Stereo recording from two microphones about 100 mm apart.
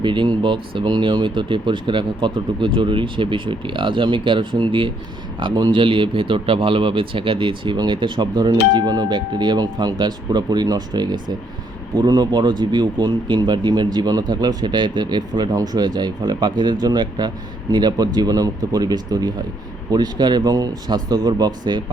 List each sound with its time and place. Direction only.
0.0 s speech: 55° right (ahead or behind)
5.8 s speech: 60° right (ahead or behind)